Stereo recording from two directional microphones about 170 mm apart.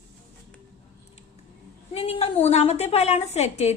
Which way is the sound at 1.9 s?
35° left (ahead or behind).